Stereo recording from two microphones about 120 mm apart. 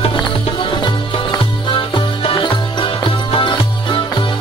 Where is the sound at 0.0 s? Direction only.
50° left (ahead or behind).